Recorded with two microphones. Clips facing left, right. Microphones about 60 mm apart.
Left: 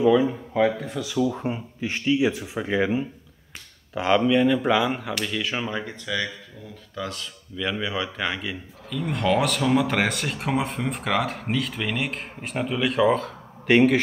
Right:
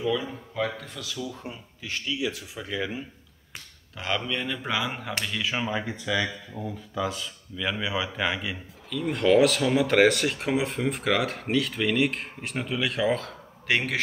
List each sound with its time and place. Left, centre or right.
0.0 s speech: left
1.1 s speech: left
3.9 s speech: centre
4.3 s speech: centre